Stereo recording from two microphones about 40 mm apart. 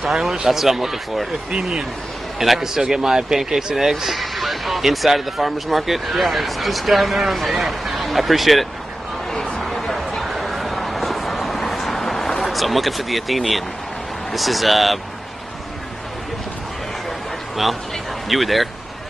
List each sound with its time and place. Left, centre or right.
0.0 s speech: centre
1.5 s speech: centre
9.6 s a sound: centre
12.4 s speech: centre
18.3 s speech: centre